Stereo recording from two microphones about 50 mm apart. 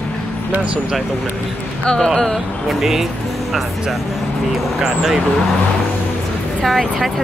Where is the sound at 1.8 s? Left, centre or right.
Centre.